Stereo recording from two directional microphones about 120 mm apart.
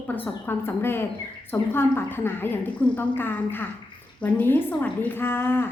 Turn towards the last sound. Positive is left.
turn(degrees=20)  # may be behind; listen again after turning